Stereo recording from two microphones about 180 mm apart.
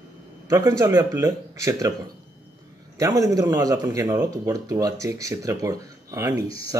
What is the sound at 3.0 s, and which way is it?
Speech, 15° right (ahead or behind).